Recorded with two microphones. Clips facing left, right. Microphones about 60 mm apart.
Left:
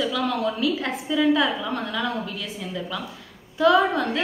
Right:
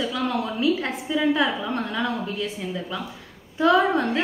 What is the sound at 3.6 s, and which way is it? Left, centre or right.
Speech, right.